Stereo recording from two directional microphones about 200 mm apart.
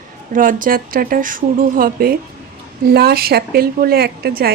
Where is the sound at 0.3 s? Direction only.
45° right (ahead or behind).